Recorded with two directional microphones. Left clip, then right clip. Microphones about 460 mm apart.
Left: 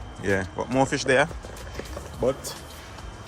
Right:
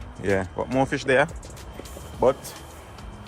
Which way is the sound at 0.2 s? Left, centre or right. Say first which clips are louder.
Right 1 dB; centre.